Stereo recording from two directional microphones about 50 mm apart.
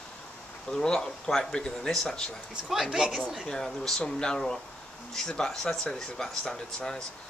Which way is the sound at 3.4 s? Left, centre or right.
Centre.